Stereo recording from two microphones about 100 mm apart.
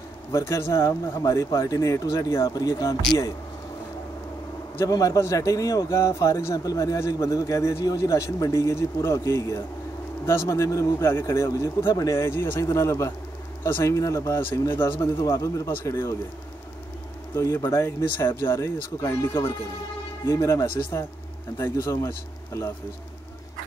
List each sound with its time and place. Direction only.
0.3 s a man's voice: 30° left (ahead or behind)
4.7 s a man's voice: 35° left (ahead or behind)
12.3 s speech: 25° left (ahead or behind)
15.2 s a man's voice: 35° left (ahead or behind)
17.6 s a man's voice: 25° left (ahead or behind)